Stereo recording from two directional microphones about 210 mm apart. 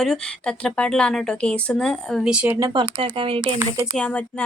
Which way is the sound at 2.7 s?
25° right (ahead or behind).